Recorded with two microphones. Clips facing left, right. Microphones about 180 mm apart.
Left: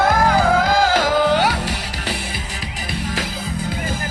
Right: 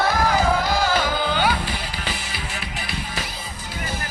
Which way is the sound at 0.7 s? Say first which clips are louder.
Left 5 dB; 90° left.